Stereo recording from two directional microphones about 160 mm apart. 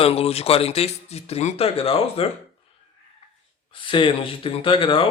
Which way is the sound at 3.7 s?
30° left (ahead or behind).